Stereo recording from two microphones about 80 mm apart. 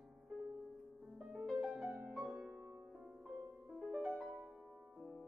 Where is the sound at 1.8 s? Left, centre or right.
Right.